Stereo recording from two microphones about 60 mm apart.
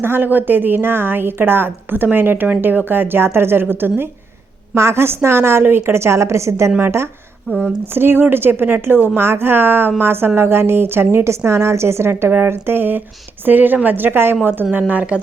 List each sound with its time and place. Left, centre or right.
0.0 s a woman's voice: right
4.7 s a woman's voice: right
6.7 s a woman's voice: right